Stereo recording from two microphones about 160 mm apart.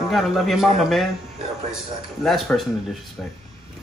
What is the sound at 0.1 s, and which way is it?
Speech, centre (ahead or behind).